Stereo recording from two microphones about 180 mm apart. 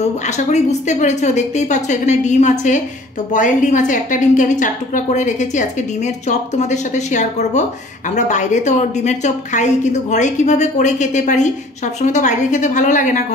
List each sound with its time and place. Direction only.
0.0 s a woman's voice: 40° left (ahead or behind)